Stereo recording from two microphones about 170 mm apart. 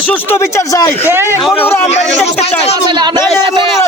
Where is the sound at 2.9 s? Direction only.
25° right (ahead or behind).